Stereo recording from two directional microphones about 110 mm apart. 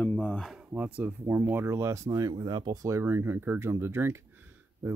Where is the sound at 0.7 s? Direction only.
15° right (ahead or behind).